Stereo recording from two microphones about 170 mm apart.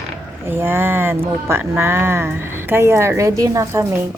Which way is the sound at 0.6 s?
15° right (ahead or behind).